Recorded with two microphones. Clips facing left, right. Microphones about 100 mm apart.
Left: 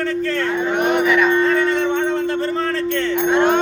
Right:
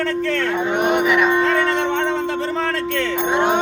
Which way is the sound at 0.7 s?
20° right (ahead or behind).